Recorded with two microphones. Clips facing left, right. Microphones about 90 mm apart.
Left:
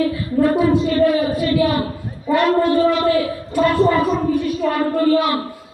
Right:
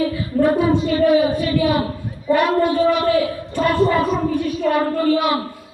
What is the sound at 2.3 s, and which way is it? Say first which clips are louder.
Speech: left 1 dB; 15° right (ahead or behind).